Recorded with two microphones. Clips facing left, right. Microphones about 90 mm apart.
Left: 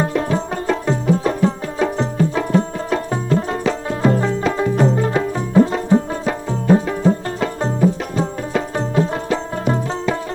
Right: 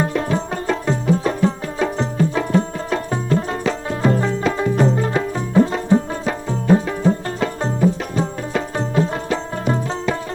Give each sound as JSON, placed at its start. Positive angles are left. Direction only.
{"t": 0.0, "sound": "tabla", "side_deg": 20}
{"t": 8.5, "sound": "music", "side_deg": 20}